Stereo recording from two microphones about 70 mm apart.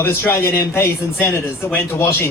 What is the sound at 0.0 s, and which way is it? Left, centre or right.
Speech, left.